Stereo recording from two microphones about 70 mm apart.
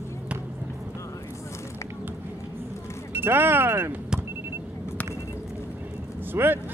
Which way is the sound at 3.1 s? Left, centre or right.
Right.